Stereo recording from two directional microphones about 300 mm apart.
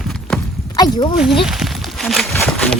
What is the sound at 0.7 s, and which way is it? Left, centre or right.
Speech, centre.